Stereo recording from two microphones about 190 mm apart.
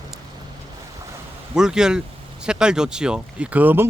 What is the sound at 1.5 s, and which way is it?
Speech, 5° right (ahead or behind).